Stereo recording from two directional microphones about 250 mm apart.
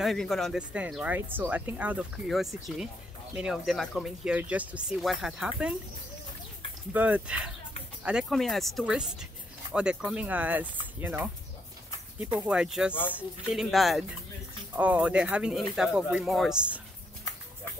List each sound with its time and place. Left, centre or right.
0.0 s speech: centre
6.9 s speech: centre